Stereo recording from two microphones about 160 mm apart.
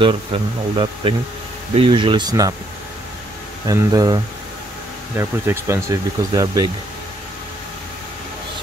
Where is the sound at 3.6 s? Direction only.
25° right (ahead or behind).